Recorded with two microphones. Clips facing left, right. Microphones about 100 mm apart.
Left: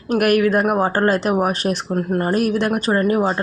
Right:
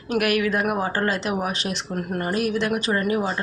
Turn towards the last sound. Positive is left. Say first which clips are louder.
# left 6 dB
turn(degrees=40)  # may be behind; listen again after turning